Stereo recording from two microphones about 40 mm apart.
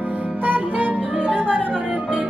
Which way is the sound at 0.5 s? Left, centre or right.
Right.